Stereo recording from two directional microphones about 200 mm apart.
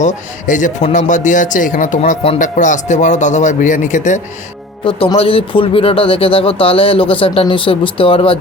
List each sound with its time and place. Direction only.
0.0 s speech: 40° left (ahead or behind)